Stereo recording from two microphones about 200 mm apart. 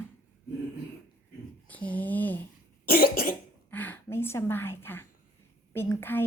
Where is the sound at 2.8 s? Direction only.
50° left (ahead or behind).